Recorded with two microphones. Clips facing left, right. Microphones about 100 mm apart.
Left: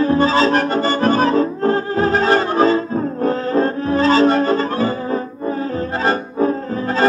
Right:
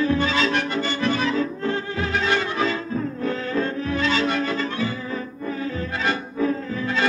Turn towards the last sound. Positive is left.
turn(degrees=40)  # may be behind; listen again after turning